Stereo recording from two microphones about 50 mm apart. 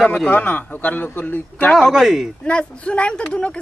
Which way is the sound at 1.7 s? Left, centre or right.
Centre.